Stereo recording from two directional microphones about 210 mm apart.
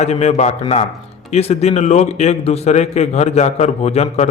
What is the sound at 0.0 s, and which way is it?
A man's voice, 30° left (ahead or behind).